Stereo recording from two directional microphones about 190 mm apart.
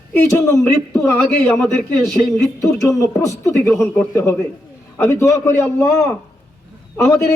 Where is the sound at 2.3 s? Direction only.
15° left (ahead or behind).